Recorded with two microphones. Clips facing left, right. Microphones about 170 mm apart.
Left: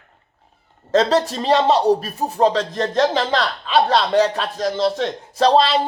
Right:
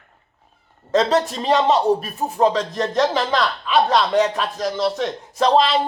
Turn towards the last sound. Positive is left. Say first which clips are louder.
# left 1 dB
turn(degrees=35)  # may be behind; listen again after turning